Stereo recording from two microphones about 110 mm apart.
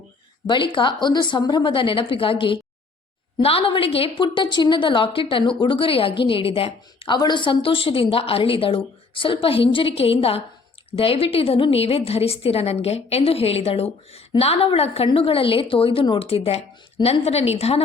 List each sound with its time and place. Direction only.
0.4 s a woman's voice: 50° left (ahead or behind)
7.2 s a woman's voice: 45° left (ahead or behind); by 17.8 s 70° left (ahead or behind)